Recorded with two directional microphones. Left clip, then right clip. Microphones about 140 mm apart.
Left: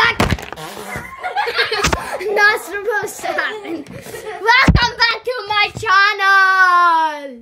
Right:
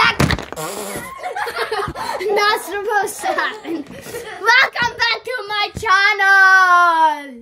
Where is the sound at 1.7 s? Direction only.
5° right (ahead or behind).